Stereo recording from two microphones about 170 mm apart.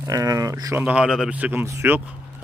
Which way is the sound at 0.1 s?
20° right (ahead or behind).